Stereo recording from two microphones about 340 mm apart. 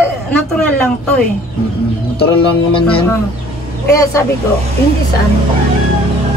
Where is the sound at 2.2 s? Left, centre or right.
Centre.